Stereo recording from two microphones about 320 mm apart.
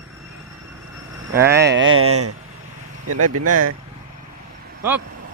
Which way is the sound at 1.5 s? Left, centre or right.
Right.